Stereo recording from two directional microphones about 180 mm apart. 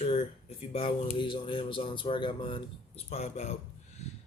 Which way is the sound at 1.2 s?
25° left (ahead or behind).